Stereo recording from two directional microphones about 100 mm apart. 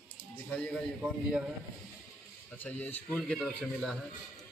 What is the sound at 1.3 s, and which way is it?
Speech, 5° right (ahead or behind).